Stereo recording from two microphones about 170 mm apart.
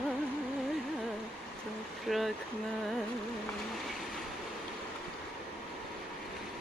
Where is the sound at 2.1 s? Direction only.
Centre (ahead or behind).